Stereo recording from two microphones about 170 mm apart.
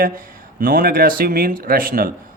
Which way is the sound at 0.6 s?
60° right (ahead or behind).